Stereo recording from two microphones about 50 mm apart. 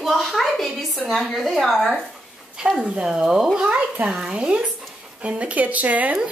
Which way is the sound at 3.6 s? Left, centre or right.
Right.